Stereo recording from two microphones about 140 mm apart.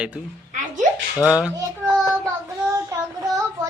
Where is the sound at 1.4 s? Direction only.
5° right (ahead or behind).